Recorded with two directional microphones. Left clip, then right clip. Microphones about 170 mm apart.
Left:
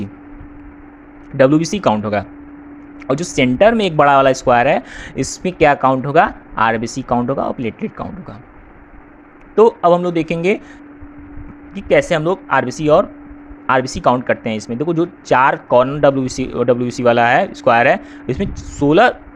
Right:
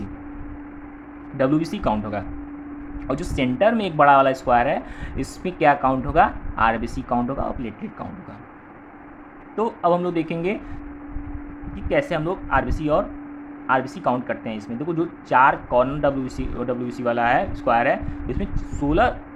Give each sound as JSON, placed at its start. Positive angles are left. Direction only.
{"t": 1.4, "sound": "speech", "side_deg": 40}
{"t": 9.6, "sound": "speech", "side_deg": 40}
{"t": 11.7, "sound": "speech", "side_deg": 50}